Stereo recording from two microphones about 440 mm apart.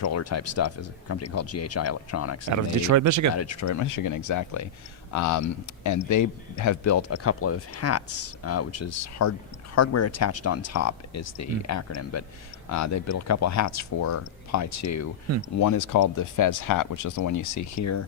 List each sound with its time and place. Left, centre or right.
0.0 s speech: left
2.5 s speech: right
3.3 s speech: left